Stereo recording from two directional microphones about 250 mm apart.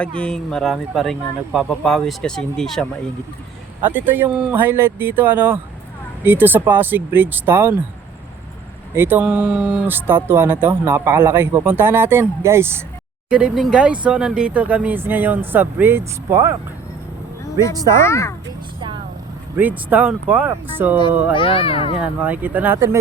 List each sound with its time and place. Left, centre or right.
0.0 s speech: centre
9.0 s speech: centre
17.9 s speech: centre
19.5 s speech: centre
21.3 s speech: left
22.0 s speech: centre